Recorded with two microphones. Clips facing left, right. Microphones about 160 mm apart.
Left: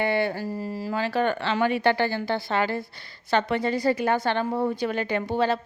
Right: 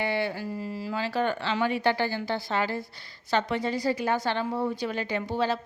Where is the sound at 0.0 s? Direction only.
55° left (ahead or behind).